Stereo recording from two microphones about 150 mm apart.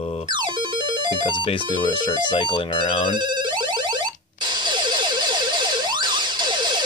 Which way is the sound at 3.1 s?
30° right (ahead or behind).